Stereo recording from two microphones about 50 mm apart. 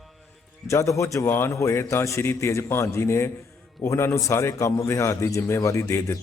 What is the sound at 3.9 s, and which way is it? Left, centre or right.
A man's voice, left.